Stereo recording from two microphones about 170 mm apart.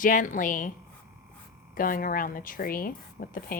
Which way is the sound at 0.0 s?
50° left (ahead or behind).